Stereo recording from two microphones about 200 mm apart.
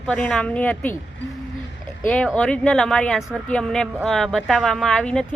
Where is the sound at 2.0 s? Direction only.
5° left (ahead or behind).